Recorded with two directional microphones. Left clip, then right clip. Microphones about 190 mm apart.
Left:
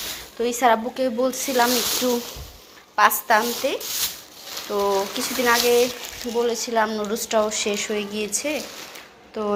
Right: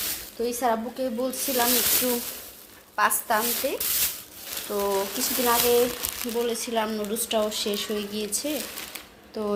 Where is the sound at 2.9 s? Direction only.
Centre (ahead or behind).